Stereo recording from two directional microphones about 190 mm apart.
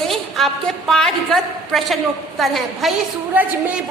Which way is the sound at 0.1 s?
Centre (ahead or behind).